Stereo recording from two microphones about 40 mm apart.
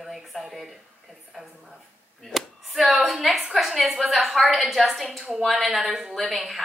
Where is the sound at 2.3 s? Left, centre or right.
Centre.